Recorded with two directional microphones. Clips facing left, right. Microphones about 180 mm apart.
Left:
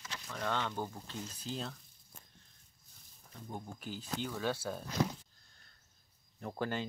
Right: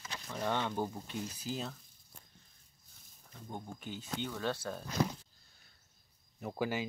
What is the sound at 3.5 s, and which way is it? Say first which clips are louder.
Speech: even; centre (ahead or behind).